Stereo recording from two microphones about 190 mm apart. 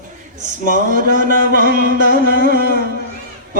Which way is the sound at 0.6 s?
45° right (ahead or behind).